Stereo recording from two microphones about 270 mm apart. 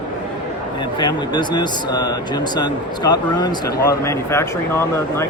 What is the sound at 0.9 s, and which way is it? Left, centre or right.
Speech, centre.